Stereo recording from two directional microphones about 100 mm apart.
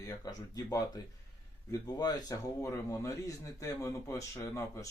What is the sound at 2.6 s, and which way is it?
Speech, 30° left (ahead or behind).